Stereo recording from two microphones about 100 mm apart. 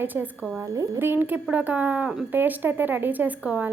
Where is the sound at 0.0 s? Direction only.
20° right (ahead or behind).